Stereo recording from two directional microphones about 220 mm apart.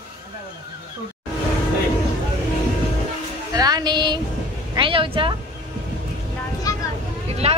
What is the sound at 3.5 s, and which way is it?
Music, 15° right (ahead or behind).